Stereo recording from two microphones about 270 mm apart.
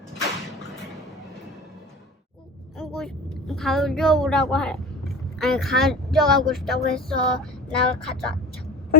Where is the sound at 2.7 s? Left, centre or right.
Centre.